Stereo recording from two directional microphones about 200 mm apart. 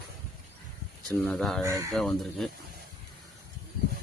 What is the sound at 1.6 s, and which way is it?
Speech, 15° right (ahead or behind).